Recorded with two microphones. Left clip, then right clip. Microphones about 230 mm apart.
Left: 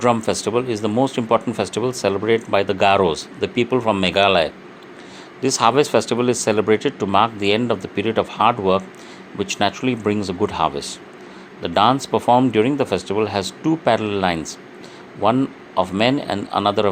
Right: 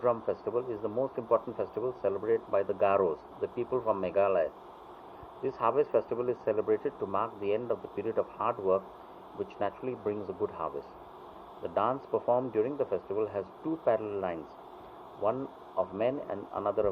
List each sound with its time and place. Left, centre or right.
0.0 s speech: left
15.8 s speech: left